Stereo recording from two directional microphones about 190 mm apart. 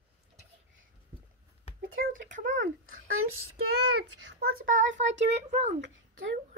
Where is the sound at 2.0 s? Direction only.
45° right (ahead or behind).